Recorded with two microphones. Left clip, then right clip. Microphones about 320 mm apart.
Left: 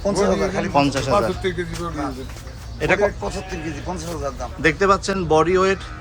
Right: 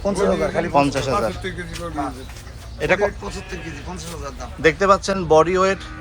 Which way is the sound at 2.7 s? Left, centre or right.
Centre.